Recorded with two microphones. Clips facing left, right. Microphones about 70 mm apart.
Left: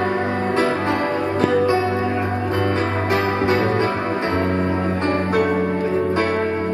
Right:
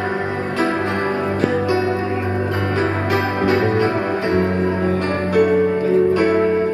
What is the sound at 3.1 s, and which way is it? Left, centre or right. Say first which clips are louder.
Music: even; left.